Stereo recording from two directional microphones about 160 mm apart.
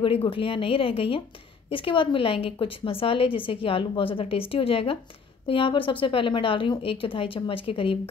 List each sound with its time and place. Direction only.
0.0 s a woman's voice: 35° left (ahead or behind)